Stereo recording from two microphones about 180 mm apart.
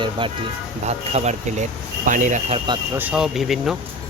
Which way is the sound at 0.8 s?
40° right (ahead or behind).